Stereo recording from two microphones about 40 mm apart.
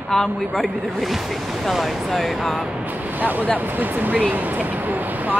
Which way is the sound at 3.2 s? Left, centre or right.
Right.